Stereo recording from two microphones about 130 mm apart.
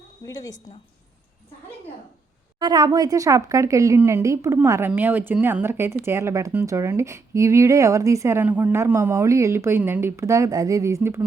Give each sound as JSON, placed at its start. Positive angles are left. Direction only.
{"t": 0.3, "sound": "speech", "side_deg": 25}
{"t": 2.6, "sound": "speech", "side_deg": -35}